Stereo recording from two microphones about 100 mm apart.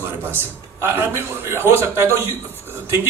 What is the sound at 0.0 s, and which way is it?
A man's voice, 25° right (ahead or behind).